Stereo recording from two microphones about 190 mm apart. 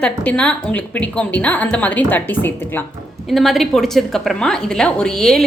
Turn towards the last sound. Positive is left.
turn(degrees=0)  # may be behind; listen again after turning